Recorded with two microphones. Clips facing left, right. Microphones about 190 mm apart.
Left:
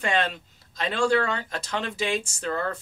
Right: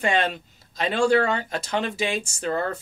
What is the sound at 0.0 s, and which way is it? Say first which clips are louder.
Speech: right 3 dB; 15° right (ahead or behind).